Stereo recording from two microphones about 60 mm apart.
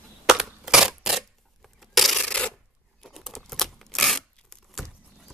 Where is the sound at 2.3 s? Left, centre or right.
Centre.